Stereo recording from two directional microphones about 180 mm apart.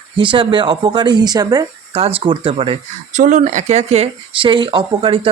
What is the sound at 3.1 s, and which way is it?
Speech, 40° right (ahead or behind).